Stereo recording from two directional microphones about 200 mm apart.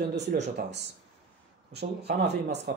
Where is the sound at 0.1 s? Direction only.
60° right (ahead or behind).